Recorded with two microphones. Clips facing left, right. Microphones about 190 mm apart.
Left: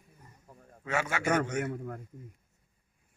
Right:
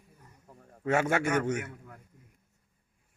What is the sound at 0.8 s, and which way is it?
Speech, 50° right (ahead or behind).